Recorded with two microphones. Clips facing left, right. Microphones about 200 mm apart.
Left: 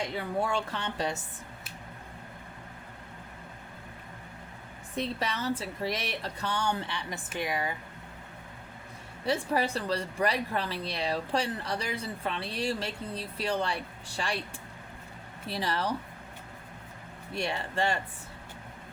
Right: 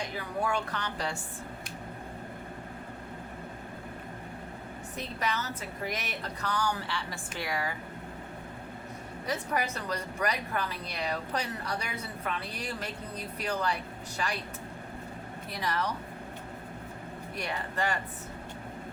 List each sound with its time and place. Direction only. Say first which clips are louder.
0.2 s speech: even; 25° left (ahead or behind)
4.9 s speech: left 2 dB; 30° left (ahead or behind)
9.2 s speech: left 4 dB; 30° left (ahead or behind)
15.4 s speech: left 2 dB; 30° left (ahead or behind)
17.3 s speech: left 3 dB; 30° left (ahead or behind)